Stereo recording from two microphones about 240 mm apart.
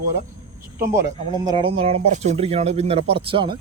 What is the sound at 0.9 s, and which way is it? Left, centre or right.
Speech, centre.